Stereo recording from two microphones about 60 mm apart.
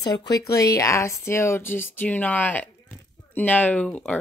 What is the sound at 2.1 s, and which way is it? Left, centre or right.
Speech, left.